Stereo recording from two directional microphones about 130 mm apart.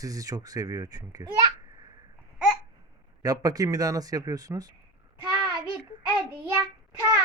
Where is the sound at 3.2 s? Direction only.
30° right (ahead or behind).